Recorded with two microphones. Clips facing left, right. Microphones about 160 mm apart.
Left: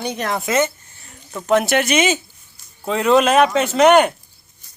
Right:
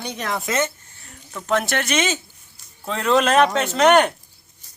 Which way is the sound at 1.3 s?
15° left (ahead or behind).